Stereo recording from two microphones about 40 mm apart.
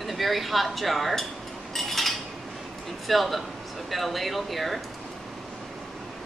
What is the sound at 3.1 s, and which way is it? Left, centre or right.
A woman's voice, centre.